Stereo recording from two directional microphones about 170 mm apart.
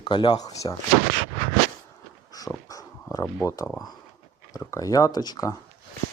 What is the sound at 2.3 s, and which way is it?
Dog, 20° left (ahead or behind).